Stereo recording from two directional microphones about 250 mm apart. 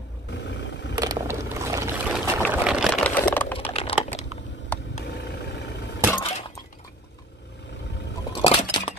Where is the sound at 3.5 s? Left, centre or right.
Left.